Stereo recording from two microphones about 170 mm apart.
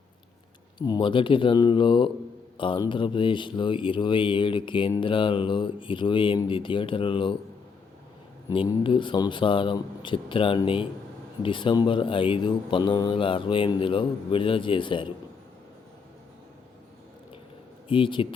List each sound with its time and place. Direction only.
0.8 s speech: 25° left (ahead or behind)
8.4 s speech: 25° left (ahead or behind)
17.8 s speech: 30° left (ahead or behind)